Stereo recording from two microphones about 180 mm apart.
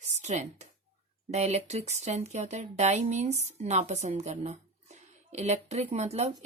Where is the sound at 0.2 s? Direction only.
40° right (ahead or behind).